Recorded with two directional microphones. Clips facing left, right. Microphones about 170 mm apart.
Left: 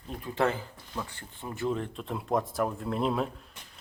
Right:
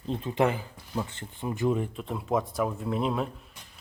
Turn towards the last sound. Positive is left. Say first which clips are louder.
# even
turn(degrees=0)  # may be behind; listen again after turning